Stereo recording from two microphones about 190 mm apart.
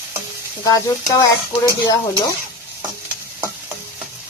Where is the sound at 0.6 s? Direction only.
20° left (ahead or behind).